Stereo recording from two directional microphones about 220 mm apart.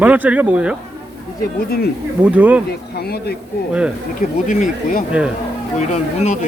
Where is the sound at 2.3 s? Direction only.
5° right (ahead or behind).